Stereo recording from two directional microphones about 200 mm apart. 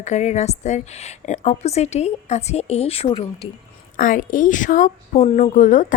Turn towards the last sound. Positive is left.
turn(degrees=40)  # may be behind; listen again after turning